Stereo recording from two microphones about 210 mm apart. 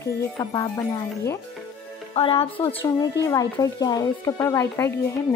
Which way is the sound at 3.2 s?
15° left (ahead or behind).